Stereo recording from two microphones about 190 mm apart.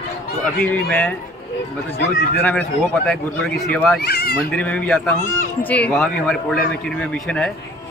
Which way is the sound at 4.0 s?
55° left (ahead or behind).